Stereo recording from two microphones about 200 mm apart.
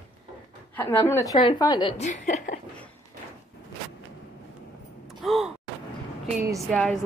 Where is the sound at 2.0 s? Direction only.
40° left (ahead or behind).